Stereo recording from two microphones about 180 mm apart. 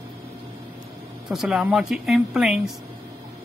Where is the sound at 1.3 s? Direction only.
5° right (ahead or behind).